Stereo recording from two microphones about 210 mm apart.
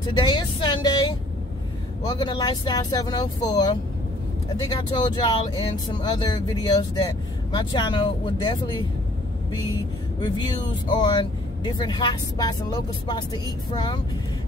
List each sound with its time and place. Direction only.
0.0 s speech: 20° left (ahead or behind)
10.2 s speech: 20° left (ahead or behind)